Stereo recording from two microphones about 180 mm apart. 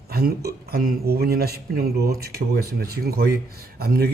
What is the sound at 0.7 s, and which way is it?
A man's voice, 60° right (ahead or behind).